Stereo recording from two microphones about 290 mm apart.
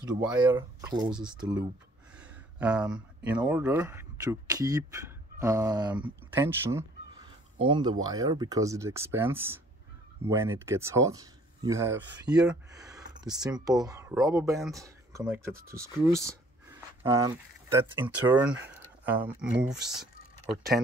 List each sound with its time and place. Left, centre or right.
0.0 s speech: centre
19.9 s typing: centre